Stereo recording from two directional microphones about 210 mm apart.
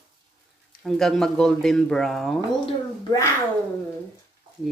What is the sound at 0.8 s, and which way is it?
A woman's voice, centre (ahead or behind).